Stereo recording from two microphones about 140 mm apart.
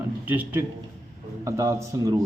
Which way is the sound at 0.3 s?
15° right (ahead or behind).